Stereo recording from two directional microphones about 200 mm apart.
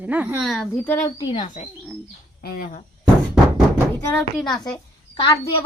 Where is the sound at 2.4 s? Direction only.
50° left (ahead or behind).